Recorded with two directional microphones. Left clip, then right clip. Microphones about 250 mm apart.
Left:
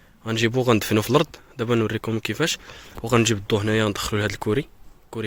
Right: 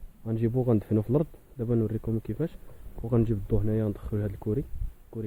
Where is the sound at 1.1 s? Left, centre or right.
Centre.